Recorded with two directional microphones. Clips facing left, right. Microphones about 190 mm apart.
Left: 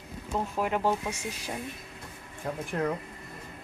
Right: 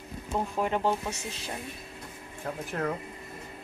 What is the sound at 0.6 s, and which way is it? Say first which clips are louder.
Speech: even; 5° left (ahead or behind).